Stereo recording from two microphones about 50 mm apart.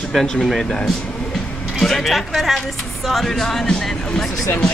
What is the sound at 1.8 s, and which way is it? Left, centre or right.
Speech, centre.